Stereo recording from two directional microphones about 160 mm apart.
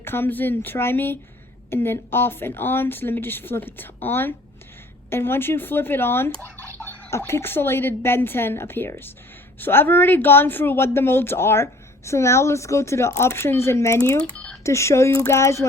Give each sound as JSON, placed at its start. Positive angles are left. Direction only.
{"t": 0.0, "sound": "speech", "side_deg": 15}
{"t": 14.3, "sound": "a sound", "side_deg": 5}
{"t": 14.6, "sound": "speech", "side_deg": 20}